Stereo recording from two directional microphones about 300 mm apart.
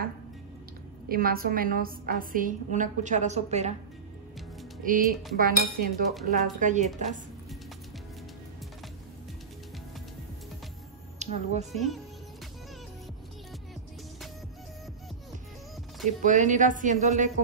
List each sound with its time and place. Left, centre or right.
1.0 s a woman's voice: right
4.8 s a woman's voice: right
11.1 s speech: right
11.7 s speech: centre
16.1 s a woman's voice: right